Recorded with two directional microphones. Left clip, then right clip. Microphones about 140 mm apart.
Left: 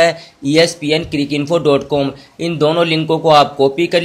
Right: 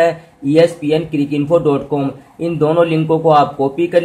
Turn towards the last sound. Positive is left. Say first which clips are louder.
# left 1 dB
turn(degrees=20)  # may be behind; listen again after turning